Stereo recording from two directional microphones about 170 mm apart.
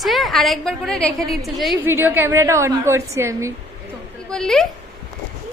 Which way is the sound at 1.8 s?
15° right (ahead or behind).